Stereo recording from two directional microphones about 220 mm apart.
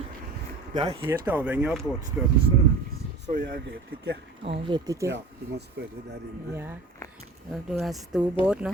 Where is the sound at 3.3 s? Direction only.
40° right (ahead or behind).